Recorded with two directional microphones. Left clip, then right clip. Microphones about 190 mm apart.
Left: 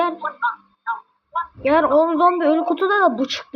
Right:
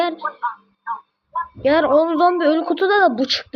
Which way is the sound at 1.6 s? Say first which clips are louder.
Right 1 dB; 15° right (ahead or behind).